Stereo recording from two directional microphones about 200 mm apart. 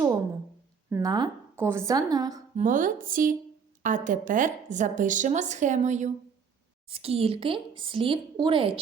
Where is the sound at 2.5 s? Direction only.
40° right (ahead or behind).